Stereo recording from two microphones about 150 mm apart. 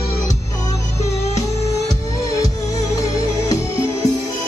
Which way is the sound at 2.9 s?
20° left (ahead or behind).